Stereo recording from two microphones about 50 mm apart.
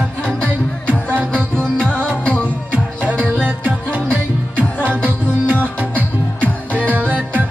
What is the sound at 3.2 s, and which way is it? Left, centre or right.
Music, right.